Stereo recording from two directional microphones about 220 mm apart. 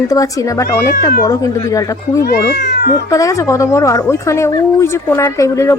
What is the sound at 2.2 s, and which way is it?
Speech, 45° left (ahead or behind).